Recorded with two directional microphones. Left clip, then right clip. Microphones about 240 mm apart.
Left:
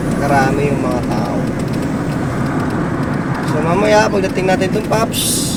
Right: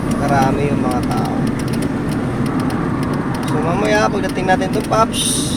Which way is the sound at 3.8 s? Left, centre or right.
Centre.